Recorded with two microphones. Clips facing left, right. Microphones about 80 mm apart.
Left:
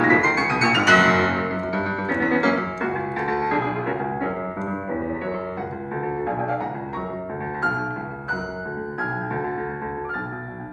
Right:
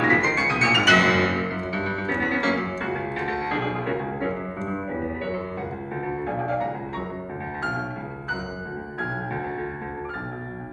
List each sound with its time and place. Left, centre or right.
0.0 s music: left
0.4 s piano: centre
2.8 s music: left